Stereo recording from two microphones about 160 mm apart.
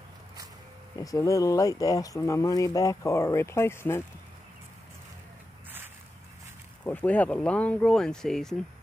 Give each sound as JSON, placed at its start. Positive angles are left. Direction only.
{"t": 0.9, "sound": "speech", "side_deg": 20}
{"t": 6.8, "sound": "speech", "side_deg": 10}